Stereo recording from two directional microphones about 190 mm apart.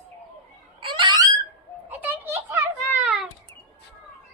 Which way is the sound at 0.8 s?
25° right (ahead or behind).